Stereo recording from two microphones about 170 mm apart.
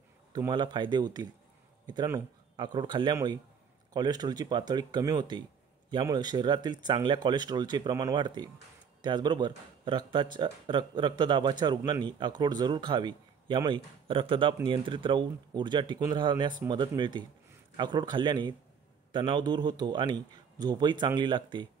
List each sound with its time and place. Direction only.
0.3 s speech: 25° right (ahead or behind)